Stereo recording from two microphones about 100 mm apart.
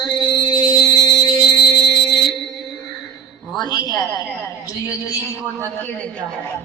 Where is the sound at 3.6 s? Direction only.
45° left (ahead or behind).